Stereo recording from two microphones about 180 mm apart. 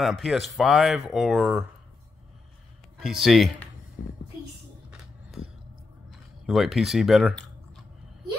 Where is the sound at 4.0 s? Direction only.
60° left (ahead or behind).